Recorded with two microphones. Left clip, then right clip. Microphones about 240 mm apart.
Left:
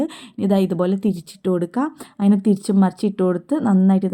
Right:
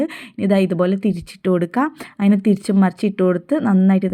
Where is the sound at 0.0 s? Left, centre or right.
Centre.